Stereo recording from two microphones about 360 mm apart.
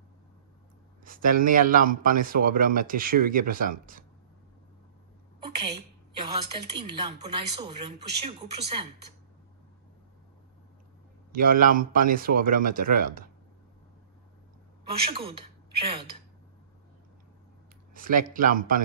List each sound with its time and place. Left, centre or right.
1.0 s speech: right
5.6 s a sound: centre
7.0 s speech: centre
11.3 s speech: right
14.9 s a woman's voice: centre
17.9 s speech: right